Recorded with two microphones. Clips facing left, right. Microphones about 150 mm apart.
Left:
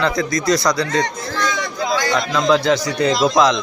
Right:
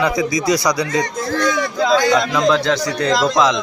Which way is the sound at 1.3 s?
55° right (ahead or behind).